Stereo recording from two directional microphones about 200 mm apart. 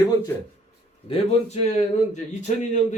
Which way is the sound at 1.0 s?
30° left (ahead or behind).